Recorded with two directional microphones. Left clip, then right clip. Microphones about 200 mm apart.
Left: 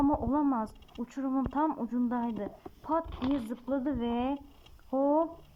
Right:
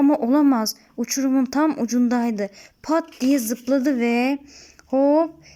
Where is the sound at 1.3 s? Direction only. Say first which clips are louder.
Right 8 dB; 55° right (ahead or behind).